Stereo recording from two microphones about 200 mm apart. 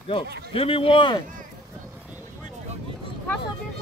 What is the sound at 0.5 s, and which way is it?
Speech, 30° left (ahead or behind).